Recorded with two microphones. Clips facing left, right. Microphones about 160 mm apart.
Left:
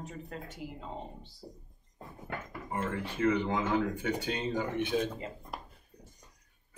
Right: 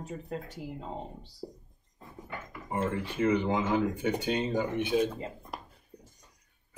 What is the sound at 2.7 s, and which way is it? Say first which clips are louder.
Speech: right 3 dB; 20° right (ahead or behind).